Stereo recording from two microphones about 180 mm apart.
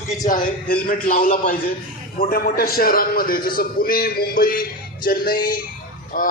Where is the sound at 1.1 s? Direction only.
50° left (ahead or behind).